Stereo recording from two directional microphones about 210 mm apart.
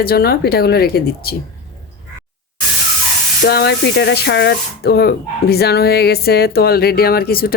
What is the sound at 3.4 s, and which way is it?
Speech, 50° left (ahead or behind).